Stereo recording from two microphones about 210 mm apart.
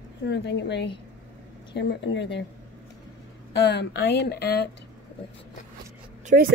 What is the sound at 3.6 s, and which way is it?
Speech, 55° left (ahead or behind).